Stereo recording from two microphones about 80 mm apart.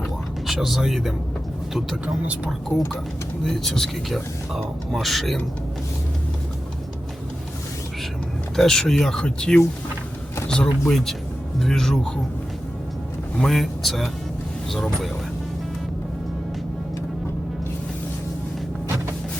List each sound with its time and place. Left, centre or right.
0.4 s speech: centre
2.2 s speech: centre
2.5 s speech: centre
8.5 s speech: centre
13.3 s speech: centre